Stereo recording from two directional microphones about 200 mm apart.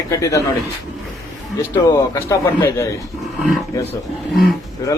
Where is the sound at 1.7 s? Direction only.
15° left (ahead or behind).